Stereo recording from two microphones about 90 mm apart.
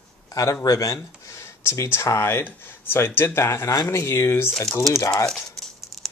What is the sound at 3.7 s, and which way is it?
Speech, 45° left (ahead or behind).